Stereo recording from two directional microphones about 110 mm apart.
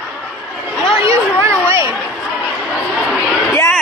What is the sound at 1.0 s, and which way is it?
Speech, 20° right (ahead or behind).